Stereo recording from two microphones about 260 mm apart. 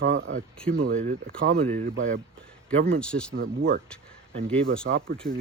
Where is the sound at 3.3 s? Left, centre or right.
Right.